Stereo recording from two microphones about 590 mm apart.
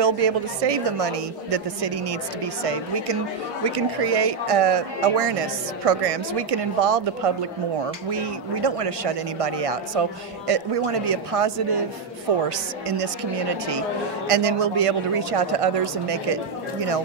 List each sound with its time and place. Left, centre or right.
0.0 s speech: right
14.2 s speech: right